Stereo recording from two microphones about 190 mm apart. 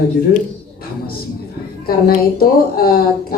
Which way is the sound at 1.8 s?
50° left (ahead or behind).